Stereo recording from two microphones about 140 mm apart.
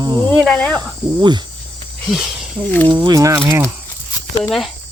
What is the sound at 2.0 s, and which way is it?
Speech, centre (ahead or behind).